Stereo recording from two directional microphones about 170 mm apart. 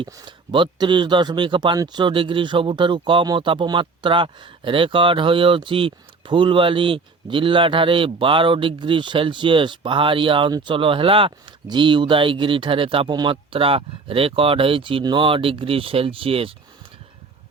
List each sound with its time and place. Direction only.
0.0 s speech: 30° right (ahead or behind)